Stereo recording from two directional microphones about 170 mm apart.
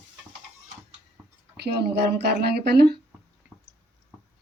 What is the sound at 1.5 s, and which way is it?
Speech, 75° right (ahead or behind).